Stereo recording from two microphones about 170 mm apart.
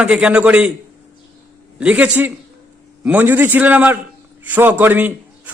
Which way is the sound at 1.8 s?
10° right (ahead or behind).